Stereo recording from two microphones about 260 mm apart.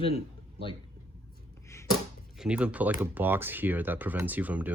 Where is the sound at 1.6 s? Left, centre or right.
Centre.